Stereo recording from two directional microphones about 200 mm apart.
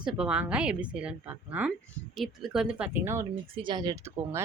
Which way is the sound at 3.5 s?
25° right (ahead or behind).